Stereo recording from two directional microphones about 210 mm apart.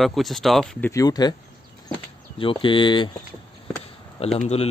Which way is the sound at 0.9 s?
15° left (ahead or behind).